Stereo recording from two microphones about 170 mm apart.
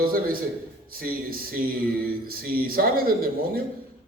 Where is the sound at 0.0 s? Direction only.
60° right (ahead or behind).